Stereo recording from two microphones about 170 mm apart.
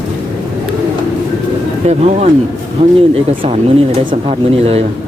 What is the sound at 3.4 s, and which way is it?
Speech, 30° right (ahead or behind).